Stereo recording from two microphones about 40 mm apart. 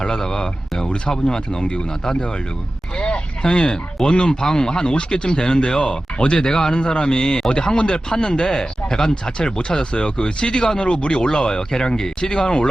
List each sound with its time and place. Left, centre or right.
0.0 s speech: centre